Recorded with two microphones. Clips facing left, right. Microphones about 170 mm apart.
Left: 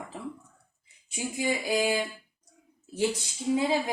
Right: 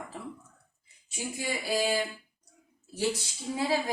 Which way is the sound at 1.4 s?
15° left (ahead or behind).